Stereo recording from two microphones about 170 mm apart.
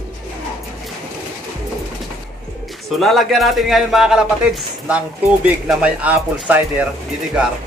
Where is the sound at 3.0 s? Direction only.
Centre (ahead or behind).